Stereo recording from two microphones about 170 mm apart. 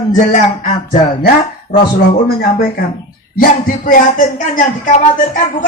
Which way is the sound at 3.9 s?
55° left (ahead or behind).